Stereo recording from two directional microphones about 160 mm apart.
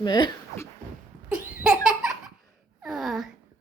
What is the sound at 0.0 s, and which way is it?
Speech, 25° left (ahead or behind).